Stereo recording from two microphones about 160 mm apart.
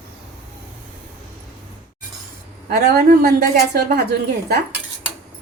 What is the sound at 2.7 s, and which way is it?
Speech, 60° right (ahead or behind).